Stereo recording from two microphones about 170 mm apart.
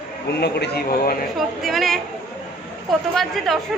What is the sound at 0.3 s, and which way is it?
Speech, 80° left.